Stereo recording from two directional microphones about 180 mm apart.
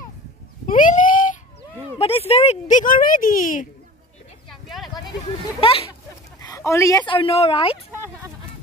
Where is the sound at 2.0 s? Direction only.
35° left (ahead or behind).